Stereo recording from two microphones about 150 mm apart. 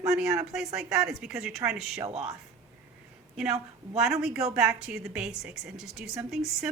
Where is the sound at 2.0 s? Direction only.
45° right (ahead or behind).